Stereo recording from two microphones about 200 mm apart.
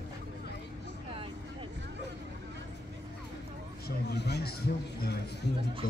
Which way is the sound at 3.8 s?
55° left (ahead or behind).